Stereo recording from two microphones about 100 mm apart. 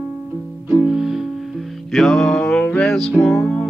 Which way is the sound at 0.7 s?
5° right (ahead or behind).